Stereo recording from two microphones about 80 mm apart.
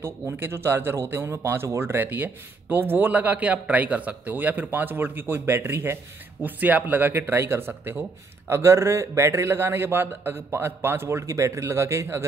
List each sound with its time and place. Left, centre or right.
0.0 s speech: right
6.4 s speech: right